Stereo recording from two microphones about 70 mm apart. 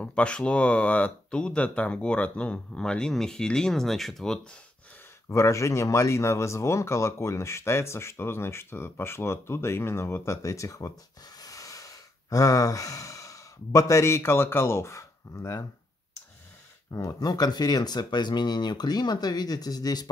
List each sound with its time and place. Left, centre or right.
0.0 s speech: centre
5.3 s speech: left
11.4 s sigh: left
17.2 s speech: left